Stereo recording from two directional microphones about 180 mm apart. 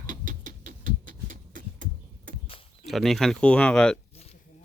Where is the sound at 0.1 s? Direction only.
45° right (ahead or behind).